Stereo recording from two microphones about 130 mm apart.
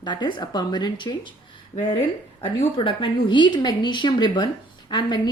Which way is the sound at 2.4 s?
45° left (ahead or behind).